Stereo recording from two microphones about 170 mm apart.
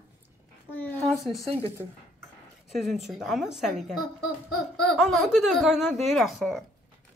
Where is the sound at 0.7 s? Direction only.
10° left (ahead or behind).